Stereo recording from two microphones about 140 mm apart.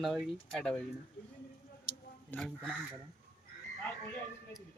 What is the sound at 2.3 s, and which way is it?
Speech, 5° left (ahead or behind).